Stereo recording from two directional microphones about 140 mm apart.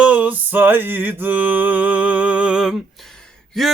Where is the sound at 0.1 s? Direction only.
10° right (ahead or behind).